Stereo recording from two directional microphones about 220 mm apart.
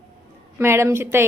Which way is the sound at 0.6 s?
10° right (ahead or behind).